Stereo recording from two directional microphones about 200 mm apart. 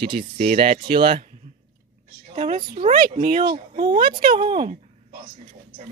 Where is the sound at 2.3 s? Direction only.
35° right (ahead or behind).